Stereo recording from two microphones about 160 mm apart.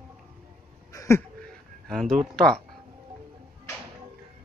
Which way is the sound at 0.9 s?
20° left (ahead or behind).